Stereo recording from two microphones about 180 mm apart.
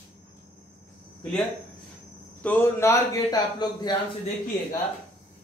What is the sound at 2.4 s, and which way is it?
A man's voice, 10° left (ahead or behind).